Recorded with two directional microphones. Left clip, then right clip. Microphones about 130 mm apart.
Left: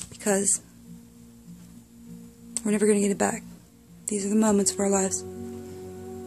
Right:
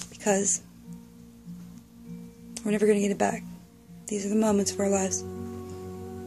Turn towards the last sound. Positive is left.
turn(degrees=35)  # may be behind; listen again after turning